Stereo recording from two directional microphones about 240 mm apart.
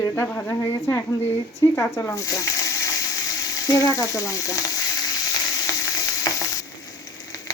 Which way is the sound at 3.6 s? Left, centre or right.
Centre.